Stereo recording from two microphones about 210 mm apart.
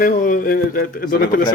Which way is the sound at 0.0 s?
40° left (ahead or behind).